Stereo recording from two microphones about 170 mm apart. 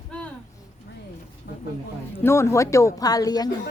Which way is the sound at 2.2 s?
15° left (ahead or behind).